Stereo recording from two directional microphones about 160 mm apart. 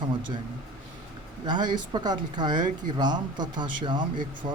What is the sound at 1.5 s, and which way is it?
Speech, 25° right (ahead or behind).